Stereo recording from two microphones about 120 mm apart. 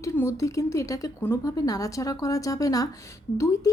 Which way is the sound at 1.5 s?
30° left (ahead or behind).